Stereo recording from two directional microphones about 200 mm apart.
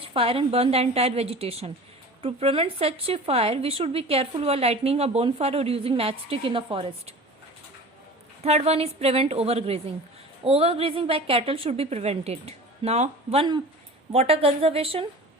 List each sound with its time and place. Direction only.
0.0 s a woman's voice: 30° right (ahead or behind)
8.4 s a woman's voice: 30° right (ahead or behind)